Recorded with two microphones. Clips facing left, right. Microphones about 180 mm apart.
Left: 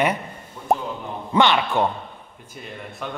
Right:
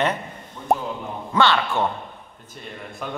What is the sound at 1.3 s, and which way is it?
Speech, 15° left (ahead or behind).